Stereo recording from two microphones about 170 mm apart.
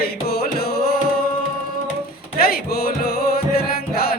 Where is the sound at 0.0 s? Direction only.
65° left (ahead or behind).